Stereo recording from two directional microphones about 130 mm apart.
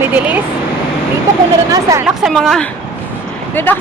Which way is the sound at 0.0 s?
15° right (ahead or behind).